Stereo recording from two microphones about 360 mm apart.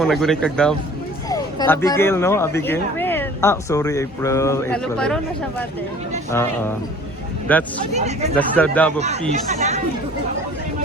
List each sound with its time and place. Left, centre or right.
0.0 s speech: centre
7.9 s speech: centre
8.4 s speech: centre
9.3 s speech: centre